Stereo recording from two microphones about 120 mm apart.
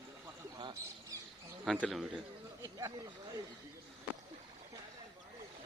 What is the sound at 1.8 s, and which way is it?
Speech, centre (ahead or behind).